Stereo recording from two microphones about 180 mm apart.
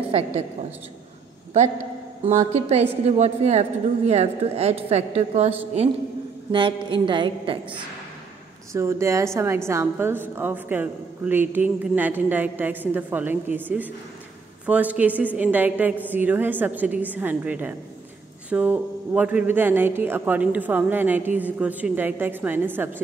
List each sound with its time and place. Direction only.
0.1 s a woman's voice: 35° right (ahead or behind)
2.2 s a woman's voice: 35° right (ahead or behind)
6.5 s a woman's voice: 25° right (ahead or behind)
8.7 s speech: 15° right (ahead or behind)